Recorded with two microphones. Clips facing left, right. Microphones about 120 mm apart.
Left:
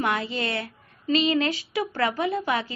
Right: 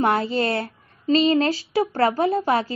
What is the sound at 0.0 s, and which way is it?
A woman's voice, 40° right (ahead or behind).